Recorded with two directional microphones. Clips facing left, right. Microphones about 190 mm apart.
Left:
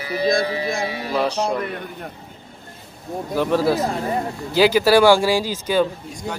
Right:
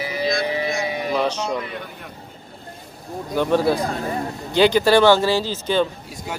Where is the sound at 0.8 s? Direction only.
20° right (ahead or behind).